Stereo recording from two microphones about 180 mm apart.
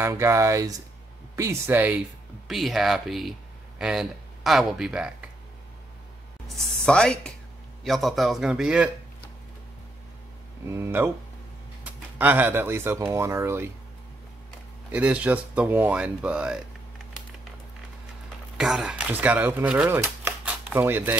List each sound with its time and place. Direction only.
0.0 s speech: 15° right (ahead or behind)
6.4 s a man's voice: centre (ahead or behind)
10.7 s speech: 15° right (ahead or behind)
14.9 s speech: 5° right (ahead or behind)
18.6 s speech: 5° right (ahead or behind)